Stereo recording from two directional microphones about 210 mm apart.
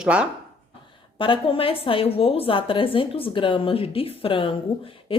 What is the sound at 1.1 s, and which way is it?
A woman's voice, 25° left (ahead or behind).